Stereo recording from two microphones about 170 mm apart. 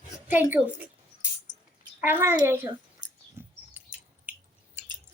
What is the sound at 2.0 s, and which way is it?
Speech, 10° right (ahead or behind).